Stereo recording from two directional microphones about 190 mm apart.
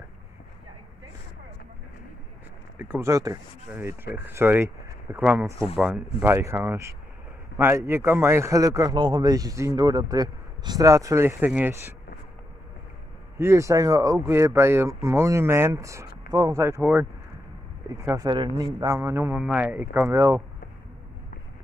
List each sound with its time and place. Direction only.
2.8 s a man's voice: 10° right (ahead or behind)
13.4 s a man's voice: 15° right (ahead or behind)